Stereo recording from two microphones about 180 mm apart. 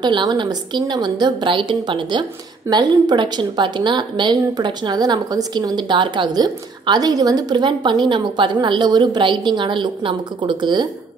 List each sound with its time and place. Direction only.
0.0 s a woman's voice: 25° right (ahead or behind)